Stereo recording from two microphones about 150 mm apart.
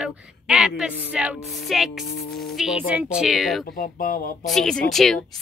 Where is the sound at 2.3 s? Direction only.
Centre (ahead or behind).